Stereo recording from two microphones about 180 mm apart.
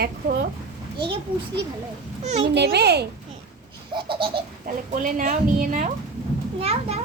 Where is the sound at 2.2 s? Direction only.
40° right (ahead or behind).